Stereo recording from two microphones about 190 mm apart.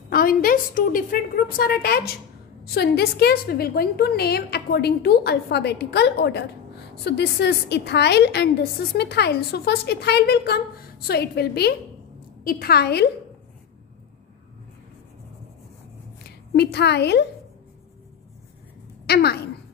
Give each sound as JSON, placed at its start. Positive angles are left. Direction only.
{"t": 0.1, "sound": "a woman's voice", "side_deg": 50}
{"t": 16.3, "sound": "a woman's voice", "side_deg": 60}
{"t": 19.0, "sound": "speech", "side_deg": 60}